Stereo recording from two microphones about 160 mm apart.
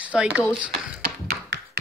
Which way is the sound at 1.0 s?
90° right.